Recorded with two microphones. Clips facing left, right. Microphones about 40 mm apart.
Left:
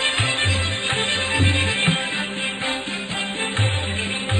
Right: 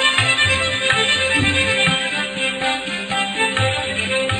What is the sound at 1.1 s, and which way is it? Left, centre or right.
Music, right.